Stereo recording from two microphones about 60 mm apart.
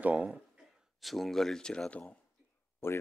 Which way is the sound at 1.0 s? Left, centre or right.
Centre.